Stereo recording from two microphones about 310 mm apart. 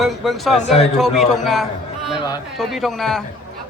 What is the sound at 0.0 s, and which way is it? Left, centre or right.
Speech, centre.